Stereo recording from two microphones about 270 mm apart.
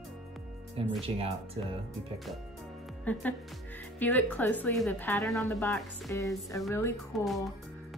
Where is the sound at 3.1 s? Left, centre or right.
Centre.